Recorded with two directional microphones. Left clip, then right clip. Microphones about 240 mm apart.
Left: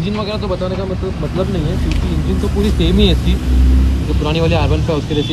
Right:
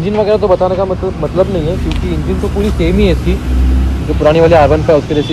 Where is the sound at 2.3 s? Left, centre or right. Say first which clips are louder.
Right 2 dB; centre.